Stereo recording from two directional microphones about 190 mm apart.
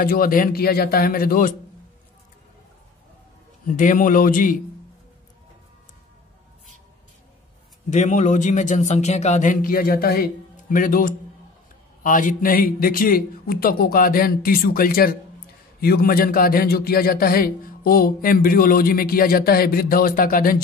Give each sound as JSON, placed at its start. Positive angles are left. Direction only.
{"t": 0.0, "sound": "a man's voice", "side_deg": 50}
{"t": 3.6, "sound": "a man's voice", "side_deg": 45}
{"t": 7.9, "sound": "a man's voice", "side_deg": 40}